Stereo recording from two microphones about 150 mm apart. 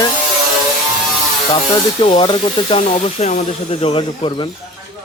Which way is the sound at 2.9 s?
45° left (ahead or behind).